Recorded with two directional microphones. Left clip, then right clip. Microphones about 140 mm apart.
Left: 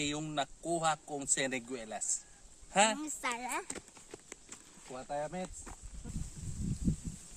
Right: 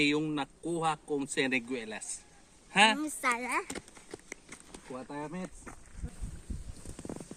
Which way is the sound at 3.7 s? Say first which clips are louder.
Right 4 dB; 90° right.